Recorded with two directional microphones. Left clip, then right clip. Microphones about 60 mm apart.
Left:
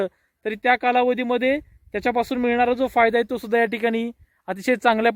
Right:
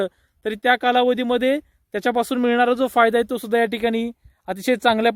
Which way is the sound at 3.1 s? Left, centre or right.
Right.